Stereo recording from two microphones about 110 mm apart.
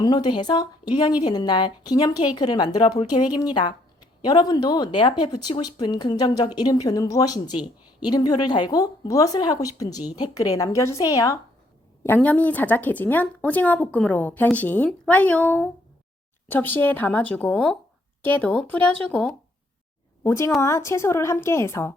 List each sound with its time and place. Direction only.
0.0 s a woman's voice: 40° left (ahead or behind)
12.0 s speech: 15° left (ahead or behind)
20.2 s a woman's voice: 25° left (ahead or behind)